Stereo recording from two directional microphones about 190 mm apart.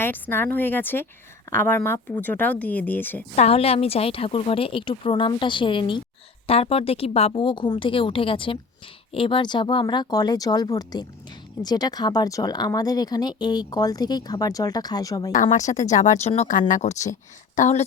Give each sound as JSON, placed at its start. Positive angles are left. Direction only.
{"t": 0.0, "sound": "speech", "side_deg": 10}
{"t": 3.3, "sound": "speech", "side_deg": 35}
{"t": 15.5, "sound": "a woman's voice", "side_deg": 40}